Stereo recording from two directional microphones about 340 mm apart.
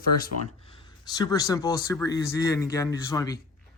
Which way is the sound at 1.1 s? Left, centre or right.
Centre.